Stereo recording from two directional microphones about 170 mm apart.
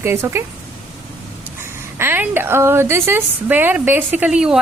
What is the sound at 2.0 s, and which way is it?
A woman's voice, 15° right (ahead or behind).